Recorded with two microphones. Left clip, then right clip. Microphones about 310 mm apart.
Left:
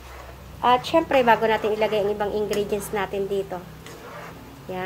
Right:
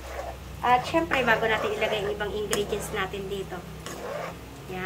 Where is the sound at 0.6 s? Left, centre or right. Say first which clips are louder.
Left 4 dB; left.